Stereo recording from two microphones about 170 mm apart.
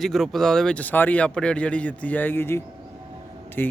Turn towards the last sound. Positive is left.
turn(degrees=10)  # may be behind; listen again after turning